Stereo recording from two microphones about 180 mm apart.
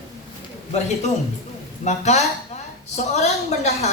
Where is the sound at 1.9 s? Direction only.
40° left (ahead or behind).